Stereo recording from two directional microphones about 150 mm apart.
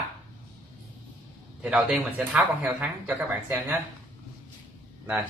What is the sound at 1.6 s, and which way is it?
Speech, 5° right (ahead or behind).